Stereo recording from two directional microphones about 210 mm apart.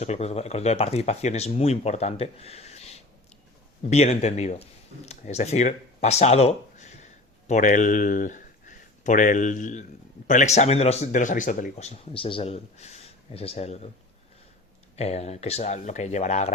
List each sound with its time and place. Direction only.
0.0 s speech: 30° left (ahead or behind)
14.9 s speech: 30° left (ahead or behind)